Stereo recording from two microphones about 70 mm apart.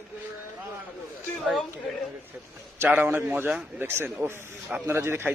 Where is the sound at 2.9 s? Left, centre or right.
Right.